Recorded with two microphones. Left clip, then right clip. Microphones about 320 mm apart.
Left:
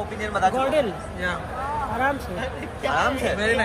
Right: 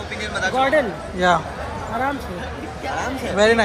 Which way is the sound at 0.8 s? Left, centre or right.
Centre.